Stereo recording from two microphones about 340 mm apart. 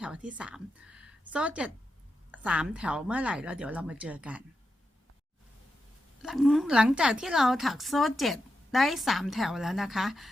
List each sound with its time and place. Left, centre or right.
0.0 s a woman's voice: centre
6.2 s a woman's voice: centre